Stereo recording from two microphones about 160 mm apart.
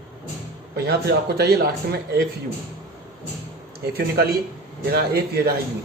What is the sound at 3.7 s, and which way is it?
Speech, 80° right.